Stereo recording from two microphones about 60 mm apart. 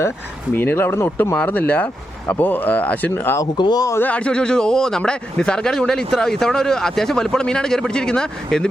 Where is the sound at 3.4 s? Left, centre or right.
Left.